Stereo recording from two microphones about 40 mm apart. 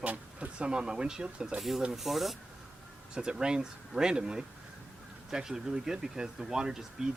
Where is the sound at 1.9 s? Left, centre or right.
Centre.